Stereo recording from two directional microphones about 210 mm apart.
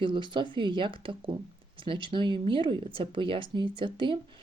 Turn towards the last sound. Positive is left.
turn(degrees=-25)  # may be behind; listen again after turning